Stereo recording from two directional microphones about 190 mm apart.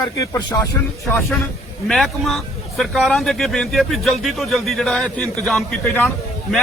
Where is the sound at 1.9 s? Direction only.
Centre (ahead or behind).